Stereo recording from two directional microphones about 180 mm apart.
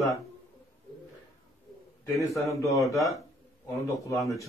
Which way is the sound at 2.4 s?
15° left (ahead or behind).